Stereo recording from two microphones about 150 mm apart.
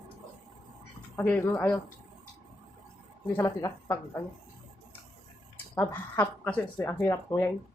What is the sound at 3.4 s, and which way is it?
Speech, 25° left (ahead or behind).